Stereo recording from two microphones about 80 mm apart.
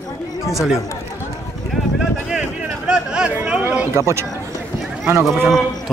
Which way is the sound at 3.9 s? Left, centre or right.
Right.